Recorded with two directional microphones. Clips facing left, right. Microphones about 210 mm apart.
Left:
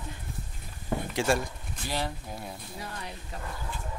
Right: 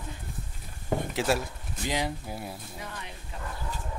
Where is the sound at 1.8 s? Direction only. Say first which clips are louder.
Right 3 dB; 15° right (ahead or behind).